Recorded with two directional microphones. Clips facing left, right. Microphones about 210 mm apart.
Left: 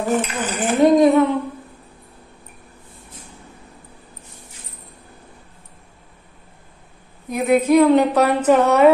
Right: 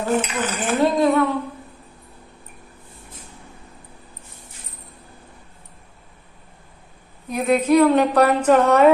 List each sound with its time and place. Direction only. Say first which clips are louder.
0.0 s a woman's voice: left 1 dB; 15° left (ahead or behind)
7.3 s a woman's voice: left 2 dB; 10° left (ahead or behind)